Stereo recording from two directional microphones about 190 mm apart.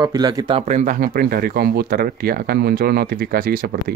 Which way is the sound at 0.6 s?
40° right (ahead or behind).